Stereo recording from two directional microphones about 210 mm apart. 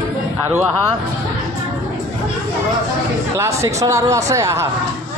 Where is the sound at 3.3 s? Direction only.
15° right (ahead or behind).